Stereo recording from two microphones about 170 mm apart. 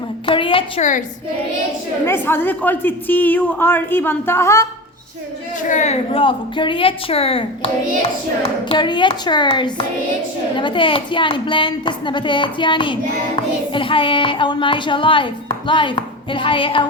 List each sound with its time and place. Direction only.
0.3 s a sound: 30° left (ahead or behind)
0.8 s a woman's voice: 45° left (ahead or behind)
2.0 s a woman's voice: 15° left (ahead or behind)
5.6 s a woman's voice: 45° left (ahead or behind)
8.7 s a woman's voice: 25° left (ahead or behind)